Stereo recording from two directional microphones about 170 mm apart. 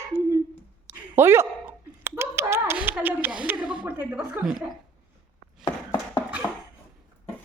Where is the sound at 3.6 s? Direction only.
25° right (ahead or behind).